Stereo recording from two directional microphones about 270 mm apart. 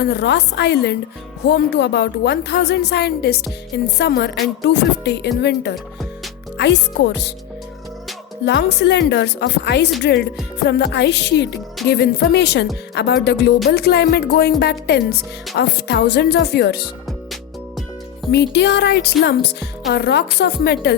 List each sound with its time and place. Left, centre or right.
0.0 s a woman's voice: left
5.7 s music: centre
6.6 s a woman's voice: left
8.4 s a woman's voice: left
18.3 s a woman's voice: left